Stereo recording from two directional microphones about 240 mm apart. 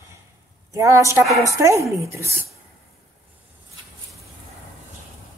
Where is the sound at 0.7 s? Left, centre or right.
Centre.